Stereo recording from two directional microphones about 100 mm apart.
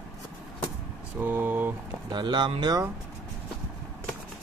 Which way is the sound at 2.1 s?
50° right (ahead or behind).